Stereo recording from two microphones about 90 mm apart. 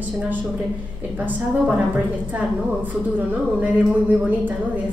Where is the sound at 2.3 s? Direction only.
20° right (ahead or behind).